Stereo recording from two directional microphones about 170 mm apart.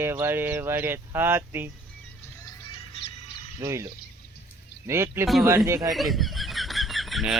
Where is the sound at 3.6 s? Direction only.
15° right (ahead or behind).